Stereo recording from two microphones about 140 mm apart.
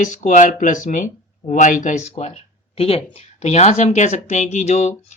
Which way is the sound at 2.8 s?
45° left (ahead or behind).